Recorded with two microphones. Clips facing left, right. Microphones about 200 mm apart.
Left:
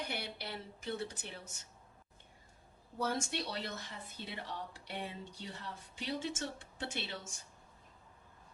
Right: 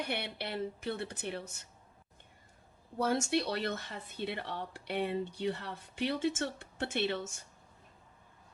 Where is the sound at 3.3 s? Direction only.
65° right (ahead or behind).